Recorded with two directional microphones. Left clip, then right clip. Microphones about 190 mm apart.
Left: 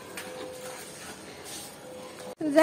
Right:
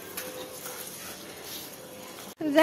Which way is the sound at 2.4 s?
Centre (ahead or behind).